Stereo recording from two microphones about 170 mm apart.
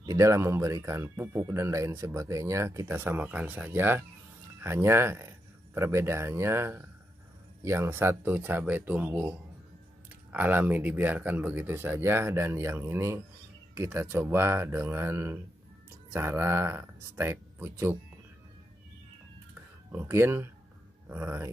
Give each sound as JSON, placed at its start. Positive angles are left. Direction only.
{"t": 0.0, "sound": "speech", "side_deg": -20}
{"t": 19.9, "sound": "speech", "side_deg": -15}